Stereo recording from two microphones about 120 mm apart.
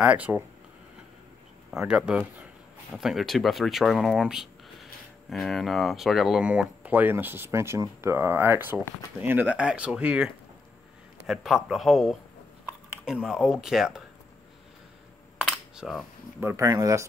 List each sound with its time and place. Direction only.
0.0 s speech: 10° right (ahead or behind)
1.7 s speech: 5° right (ahead or behind)
15.4 s coin: 5° right (ahead or behind)
16.3 s speech: 20° right (ahead or behind)